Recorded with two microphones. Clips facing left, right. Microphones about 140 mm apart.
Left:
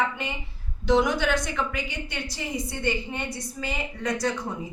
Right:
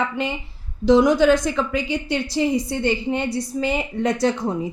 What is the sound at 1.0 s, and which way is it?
Speech, 35° right (ahead or behind).